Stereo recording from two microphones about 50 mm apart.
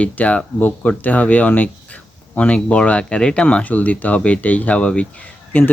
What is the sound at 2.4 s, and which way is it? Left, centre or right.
Speech, left.